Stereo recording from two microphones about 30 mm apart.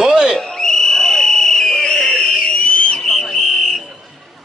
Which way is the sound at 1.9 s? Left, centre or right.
Left.